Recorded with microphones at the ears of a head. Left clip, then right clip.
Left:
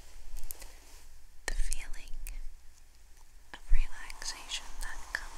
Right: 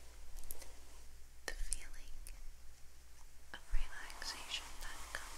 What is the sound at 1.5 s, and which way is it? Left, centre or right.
Whispering, left.